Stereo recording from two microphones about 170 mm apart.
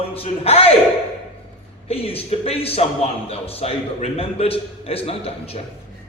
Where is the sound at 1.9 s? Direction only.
35° left (ahead or behind).